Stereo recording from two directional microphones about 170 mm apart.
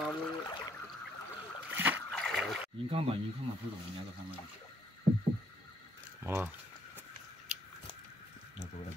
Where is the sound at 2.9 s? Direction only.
35° right (ahead or behind).